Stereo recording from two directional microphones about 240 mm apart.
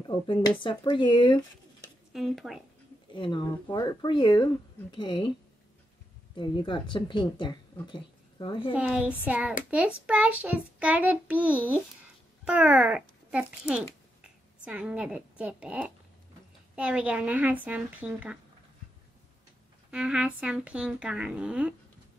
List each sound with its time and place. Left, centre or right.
0.0 s speech: centre
2.1 s speech: centre
3.1 s speech: centre
6.3 s a woman's voice: centre
8.7 s a child's voice: centre
19.9 s speech: centre